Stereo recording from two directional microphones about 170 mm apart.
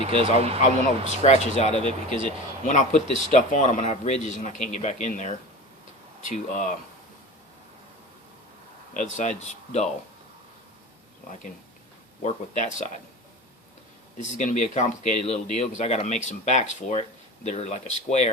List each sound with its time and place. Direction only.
0.0 s speech: 35° right (ahead or behind)
1.2 s a man's voice: 40° left (ahead or behind)
6.3 s a man's voice: 45° left (ahead or behind)
9.1 s a man's voice: 40° left (ahead or behind)
12.2 s a man's voice: 45° left (ahead or behind)
14.2 s a man's voice: 45° left (ahead or behind)